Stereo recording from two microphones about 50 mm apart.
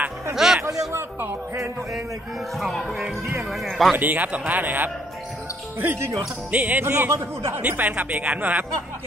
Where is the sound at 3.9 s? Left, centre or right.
Right.